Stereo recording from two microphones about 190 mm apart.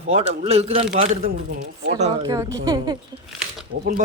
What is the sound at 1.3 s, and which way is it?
Speech, 65° right (ahead or behind).